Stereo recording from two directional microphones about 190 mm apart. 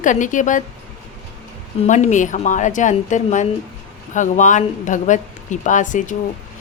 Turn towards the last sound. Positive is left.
turn(degrees=40)  # may be behind; listen again after turning